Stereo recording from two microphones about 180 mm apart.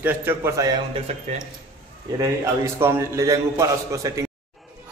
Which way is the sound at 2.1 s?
15° right (ahead or behind).